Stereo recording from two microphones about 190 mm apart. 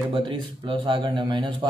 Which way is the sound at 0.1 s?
25° right (ahead or behind).